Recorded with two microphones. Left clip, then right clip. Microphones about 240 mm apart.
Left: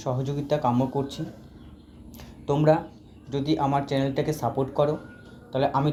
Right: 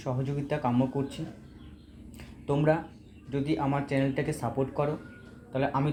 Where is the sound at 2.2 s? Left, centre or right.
Left.